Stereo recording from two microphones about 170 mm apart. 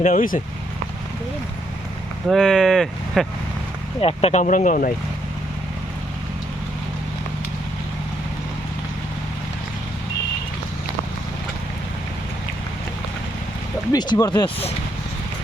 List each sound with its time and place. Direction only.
0.0 s speech: 55° left (ahead or behind)
2.3 s speech: 5° left (ahead or behind)
4.0 s speech: 40° left (ahead or behind)
13.9 s speech: 25° left (ahead or behind)